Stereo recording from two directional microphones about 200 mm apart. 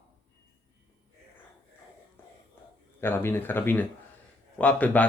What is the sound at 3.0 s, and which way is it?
Speech, 10° left (ahead or behind).